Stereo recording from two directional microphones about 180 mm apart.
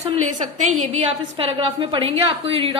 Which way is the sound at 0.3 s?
45° right (ahead or behind).